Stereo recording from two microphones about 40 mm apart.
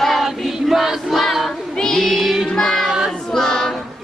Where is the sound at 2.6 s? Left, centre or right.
Centre.